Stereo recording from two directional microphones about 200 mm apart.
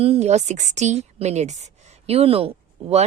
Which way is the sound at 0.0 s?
30° right (ahead or behind).